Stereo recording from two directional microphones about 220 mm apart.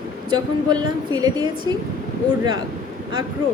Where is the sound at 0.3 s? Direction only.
20° right (ahead or behind).